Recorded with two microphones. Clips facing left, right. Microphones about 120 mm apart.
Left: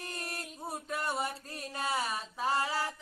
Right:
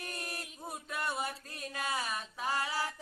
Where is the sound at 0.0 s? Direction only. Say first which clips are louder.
Left 1 dB; 30° left (ahead or behind).